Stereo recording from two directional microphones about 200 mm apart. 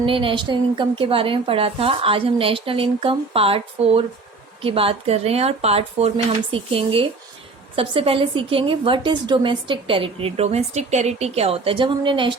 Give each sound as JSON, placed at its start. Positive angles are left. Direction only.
{"t": 0.0, "sound": "a woman's voice", "side_deg": -25}